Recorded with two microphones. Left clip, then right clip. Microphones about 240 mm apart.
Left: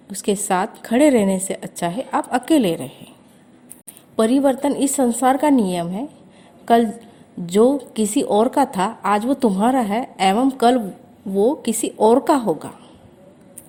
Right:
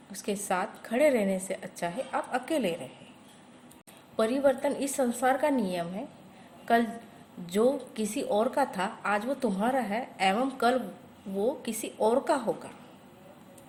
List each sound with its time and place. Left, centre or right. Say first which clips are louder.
0.1 s a woman's voice: left 11 dB; left
4.2 s a woman's voice: left 8 dB; left